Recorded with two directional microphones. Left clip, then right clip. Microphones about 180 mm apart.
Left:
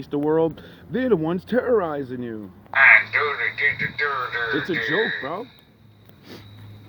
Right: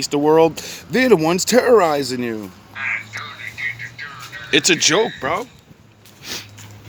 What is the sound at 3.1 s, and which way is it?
Radio, 50° left (ahead or behind).